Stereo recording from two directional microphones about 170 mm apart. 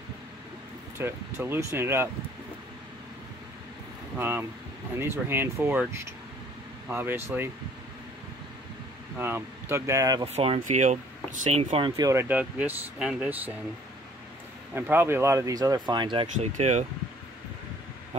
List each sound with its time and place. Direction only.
0.9 s speech: 15° right (ahead or behind)
4.2 s speech: 15° right (ahead or behind)
9.2 s speech: 15° right (ahead or behind)
10.2 s speech: 35° right (ahead or behind)
12.0 s speech: 15° right (ahead or behind)
14.7 s speech: 10° right (ahead or behind); by 16.3 s 25° right (ahead or behind)
16.3 s speech: 40° right (ahead or behind)